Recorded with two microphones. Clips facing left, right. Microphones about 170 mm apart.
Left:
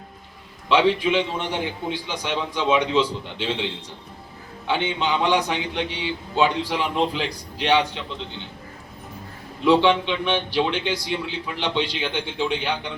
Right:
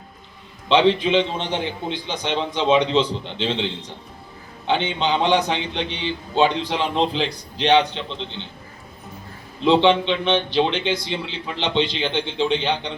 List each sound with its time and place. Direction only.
0.7 s a man's voice: 25° right (ahead or behind)
9.6 s a man's voice: 25° right (ahead or behind)